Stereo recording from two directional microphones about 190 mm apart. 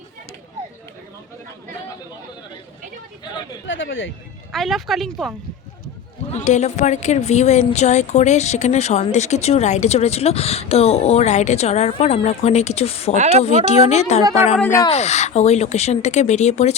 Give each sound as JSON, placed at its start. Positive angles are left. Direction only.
{"t": 3.7, "sound": "speech", "side_deg": 90}
{"t": 4.5, "sound": "speech", "side_deg": 0}
{"t": 6.3, "sound": "a woman's voice", "side_deg": 35}
{"t": 14.6, "sound": "speech", "side_deg": 15}
{"t": 14.8, "sound": "a woman's voice", "side_deg": 35}